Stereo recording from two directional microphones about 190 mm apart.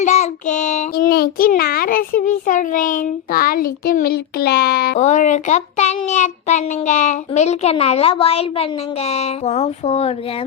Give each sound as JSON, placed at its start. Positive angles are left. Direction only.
{"t": 0.0, "sound": "child singing", "side_deg": 40}
{"t": 4.9, "sound": "a child's voice", "side_deg": 40}